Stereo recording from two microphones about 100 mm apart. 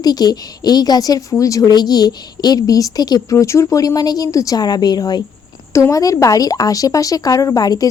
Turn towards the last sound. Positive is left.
turn(degrees=40)  # may be behind; listen again after turning